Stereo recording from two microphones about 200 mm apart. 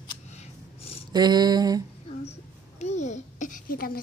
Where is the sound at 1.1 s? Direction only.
20° right (ahead or behind).